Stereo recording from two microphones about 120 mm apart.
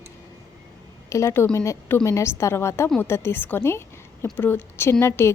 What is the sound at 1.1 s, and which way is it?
A woman's voice, 20° left (ahead or behind).